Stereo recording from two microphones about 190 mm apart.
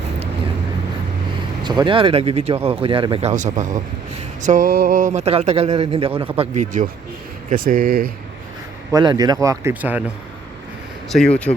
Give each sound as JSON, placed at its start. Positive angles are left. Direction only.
{"t": 1.6, "sound": "speech", "side_deg": -25}
{"t": 8.9, "sound": "speech", "side_deg": -20}
{"t": 11.5, "sound": "speech", "side_deg": 30}